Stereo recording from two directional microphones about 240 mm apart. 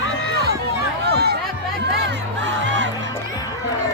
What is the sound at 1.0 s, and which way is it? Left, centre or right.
Music, right.